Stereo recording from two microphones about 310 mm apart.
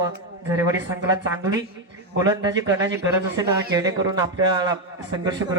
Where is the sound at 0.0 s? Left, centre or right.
Centre.